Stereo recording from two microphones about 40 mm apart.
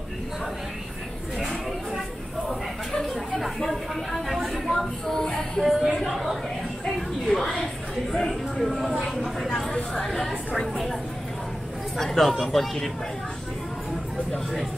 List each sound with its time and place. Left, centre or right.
2.9 s chatter: centre
3.3 s a sound: centre
5.3 s music: centre
7.0 s a sound: centre
8.9 s speech: centre
12.0 s speech: centre